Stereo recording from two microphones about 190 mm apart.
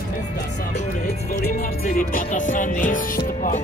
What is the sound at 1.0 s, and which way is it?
Music, 50° left (ahead or behind).